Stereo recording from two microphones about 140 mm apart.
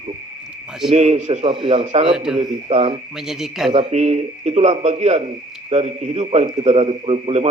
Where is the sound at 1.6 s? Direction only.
45° right (ahead or behind).